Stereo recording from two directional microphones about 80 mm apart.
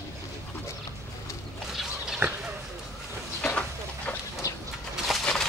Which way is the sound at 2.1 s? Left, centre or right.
Centre.